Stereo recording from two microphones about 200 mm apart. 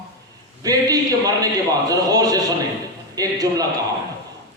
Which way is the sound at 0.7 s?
15° right (ahead or behind).